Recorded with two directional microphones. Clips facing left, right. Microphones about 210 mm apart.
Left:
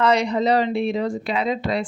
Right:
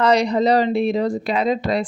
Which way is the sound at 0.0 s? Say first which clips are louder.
Right 3 dB; 35° right (ahead or behind).